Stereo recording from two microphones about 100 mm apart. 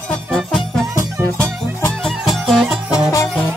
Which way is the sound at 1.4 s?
20° left (ahead or behind).